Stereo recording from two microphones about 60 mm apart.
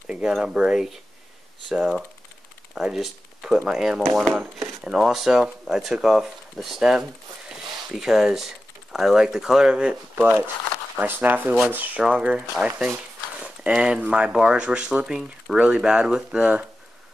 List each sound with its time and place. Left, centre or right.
0.0 s a sound: centre
0.4 s speech: centre
4.1 s speech: centre
4.8 s speech: centre
10.2 s speech: right
12.1 s speech: centre
13.4 s horse: centre
14.0 s speech: right